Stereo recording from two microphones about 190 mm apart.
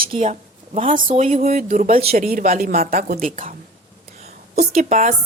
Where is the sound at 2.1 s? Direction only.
50° right (ahead or behind).